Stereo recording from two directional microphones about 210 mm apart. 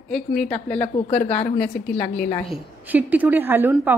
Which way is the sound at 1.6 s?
5° left (ahead or behind).